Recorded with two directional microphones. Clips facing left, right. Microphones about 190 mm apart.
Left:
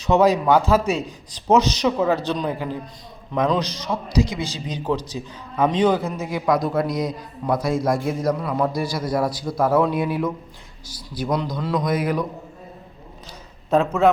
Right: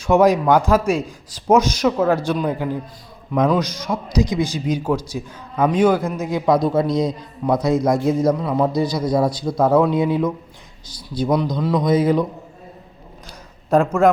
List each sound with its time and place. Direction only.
0.0 s a man's voice: 10° right (ahead or behind)
13.7 s a man's voice: 10° right (ahead or behind)